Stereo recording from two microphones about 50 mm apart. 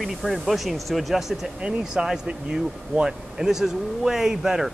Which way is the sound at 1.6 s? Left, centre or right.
Centre.